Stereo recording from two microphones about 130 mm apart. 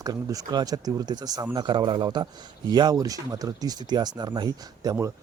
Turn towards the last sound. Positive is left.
turn(degrees=-30)  # may be behind; listen again after turning